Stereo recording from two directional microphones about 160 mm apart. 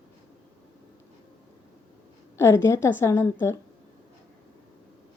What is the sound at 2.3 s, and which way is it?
A woman's voice, 15° left (ahead or behind).